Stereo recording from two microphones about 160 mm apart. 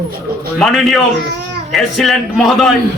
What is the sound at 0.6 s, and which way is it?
A man's voice, centre (ahead or behind).